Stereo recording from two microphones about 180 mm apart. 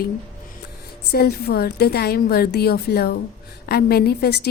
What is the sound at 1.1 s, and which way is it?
A woman's voice, 60° left (ahead or behind).